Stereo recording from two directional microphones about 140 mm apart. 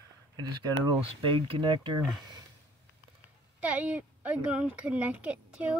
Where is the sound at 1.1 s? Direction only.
40° right (ahead or behind).